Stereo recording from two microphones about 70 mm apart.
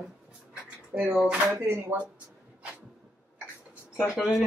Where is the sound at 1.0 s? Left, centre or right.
Right.